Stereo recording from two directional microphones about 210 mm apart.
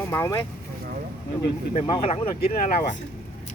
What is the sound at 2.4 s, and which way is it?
Speech, 40° left (ahead or behind).